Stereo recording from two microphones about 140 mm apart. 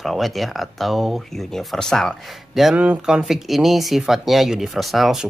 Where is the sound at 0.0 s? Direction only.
Centre (ahead or behind).